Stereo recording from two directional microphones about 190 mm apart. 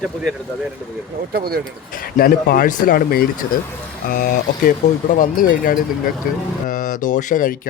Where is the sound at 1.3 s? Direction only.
55° right (ahead or behind).